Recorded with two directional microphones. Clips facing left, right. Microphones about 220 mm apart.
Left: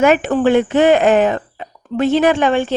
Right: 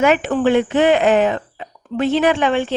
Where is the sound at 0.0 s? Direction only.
45° left (ahead or behind).